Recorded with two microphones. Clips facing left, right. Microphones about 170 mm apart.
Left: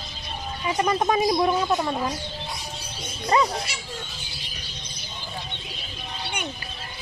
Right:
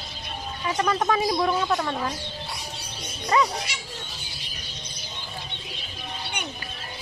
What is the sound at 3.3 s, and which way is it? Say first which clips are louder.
Speech: left 1 dB; 30° left (ahead or behind).